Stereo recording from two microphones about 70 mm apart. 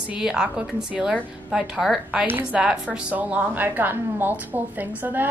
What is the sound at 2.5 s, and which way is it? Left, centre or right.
A woman's voice, centre.